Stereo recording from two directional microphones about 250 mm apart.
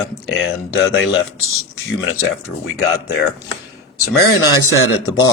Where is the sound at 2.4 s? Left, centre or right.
Left.